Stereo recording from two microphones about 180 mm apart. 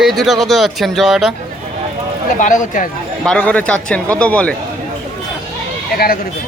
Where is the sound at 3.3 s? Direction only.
10° left (ahead or behind).